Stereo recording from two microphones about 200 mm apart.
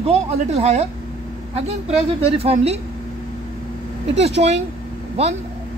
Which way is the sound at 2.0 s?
30° right (ahead or behind).